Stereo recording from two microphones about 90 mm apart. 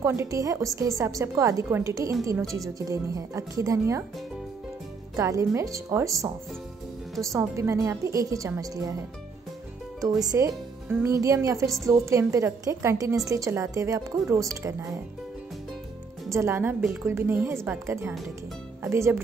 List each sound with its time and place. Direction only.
0.0 s a woman's voice: 30° right (ahead or behind)
5.1 s a woman's voice: 35° right (ahead or behind)
7.3 s a woman's voice: 30° right (ahead or behind)
9.9 s a woman's voice: 40° right (ahead or behind)
16.3 s a woman's voice: 30° right (ahead or behind)